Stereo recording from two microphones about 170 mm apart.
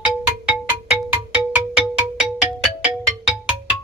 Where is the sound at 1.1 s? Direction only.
10° right (ahead or behind).